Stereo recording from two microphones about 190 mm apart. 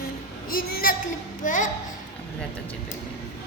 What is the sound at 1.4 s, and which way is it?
Speech, 40° left (ahead or behind).